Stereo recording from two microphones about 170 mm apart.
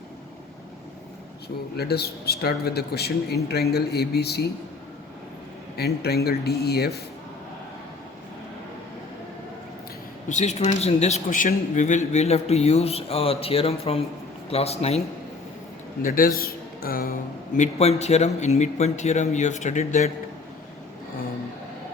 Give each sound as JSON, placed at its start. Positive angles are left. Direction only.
{"t": 1.7, "sound": "speech", "side_deg": 70}
{"t": 5.7, "sound": "speech", "side_deg": 70}
{"t": 10.2, "sound": "a man's voice", "side_deg": 45}
{"t": 16.0, "sound": "a man's voice", "side_deg": 55}
{"t": 17.6, "sound": "a man's voice", "side_deg": 40}